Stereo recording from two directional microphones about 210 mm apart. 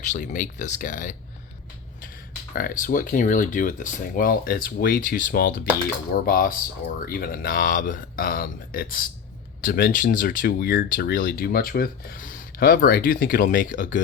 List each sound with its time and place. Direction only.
0.0 s speech: 35° left (ahead or behind)
2.5 s speech: 45° left (ahead or behind)